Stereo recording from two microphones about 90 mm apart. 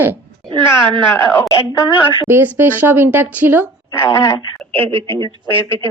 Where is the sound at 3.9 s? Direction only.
30° left (ahead or behind).